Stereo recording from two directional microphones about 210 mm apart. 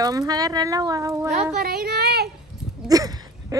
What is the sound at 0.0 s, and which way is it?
Speech, 15° right (ahead or behind).